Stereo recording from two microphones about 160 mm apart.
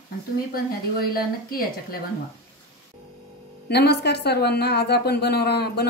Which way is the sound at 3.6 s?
90° left.